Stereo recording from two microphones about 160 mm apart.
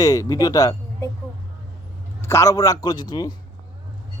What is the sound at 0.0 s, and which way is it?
Speech, 20° left (ahead or behind).